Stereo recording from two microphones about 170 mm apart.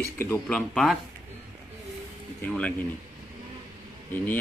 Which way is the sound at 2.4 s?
10° left (ahead or behind).